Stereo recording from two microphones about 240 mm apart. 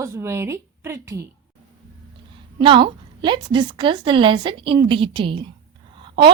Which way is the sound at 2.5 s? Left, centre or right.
Right.